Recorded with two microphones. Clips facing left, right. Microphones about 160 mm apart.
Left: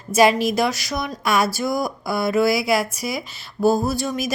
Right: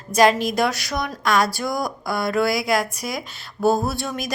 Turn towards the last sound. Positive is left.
turn(degrees=0)  # may be behind; listen again after turning